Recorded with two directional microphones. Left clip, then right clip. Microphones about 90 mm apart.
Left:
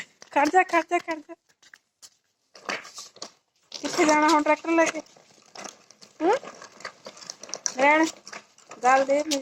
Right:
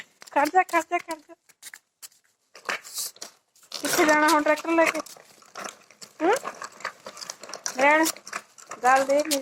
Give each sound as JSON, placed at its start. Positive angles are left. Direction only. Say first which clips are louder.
{"t": 0.3, "sound": "speech", "louder": "left 1 dB", "side_deg": 35}
{"t": 1.1, "sound": "a sound", "louder": "left 2 dB", "side_deg": 35}
{"t": 6.0, "sound": "crumpling", "louder": "even", "side_deg": 35}